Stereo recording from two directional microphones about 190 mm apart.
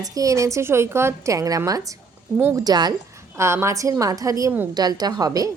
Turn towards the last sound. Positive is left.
turn(degrees=-20)  # may be behind; listen again after turning